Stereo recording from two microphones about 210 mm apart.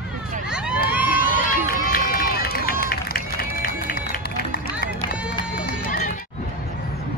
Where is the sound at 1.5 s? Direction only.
45° left (ahead or behind).